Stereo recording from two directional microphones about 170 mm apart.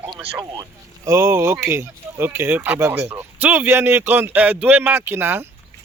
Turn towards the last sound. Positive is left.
turn(degrees=-15)  # may be behind; listen again after turning